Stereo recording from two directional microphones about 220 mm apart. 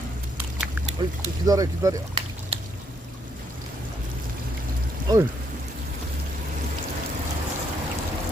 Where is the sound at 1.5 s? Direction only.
15° right (ahead or behind).